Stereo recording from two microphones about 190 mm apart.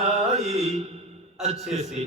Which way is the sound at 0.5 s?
35° right (ahead or behind).